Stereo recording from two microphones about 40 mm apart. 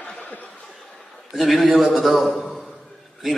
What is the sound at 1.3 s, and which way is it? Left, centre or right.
A man's voice, centre.